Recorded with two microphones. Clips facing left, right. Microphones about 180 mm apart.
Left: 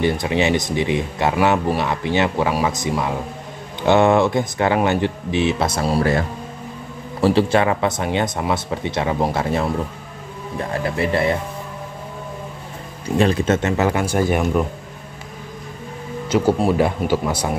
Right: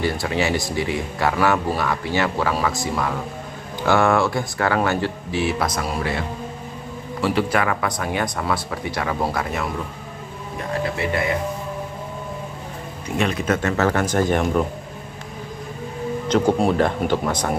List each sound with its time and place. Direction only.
0.0 s speech: 20° left (ahead or behind)
7.2 s speech: 30° left (ahead or behind)
11.1 s speech: 35° left (ahead or behind)
13.2 s speech: 35° left (ahead or behind)
13.6 s speech: 15° left (ahead or behind)
16.3 s speech: 5° left (ahead or behind)